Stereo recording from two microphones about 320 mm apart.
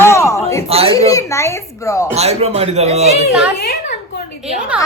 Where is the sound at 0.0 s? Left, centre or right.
Centre.